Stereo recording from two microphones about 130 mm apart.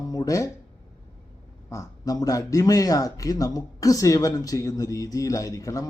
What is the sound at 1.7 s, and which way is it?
Speech, 30° left (ahead or behind).